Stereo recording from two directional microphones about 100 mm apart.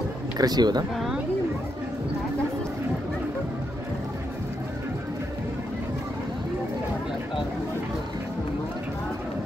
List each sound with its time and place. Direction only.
0.4 s speech: 45° right (ahead or behind)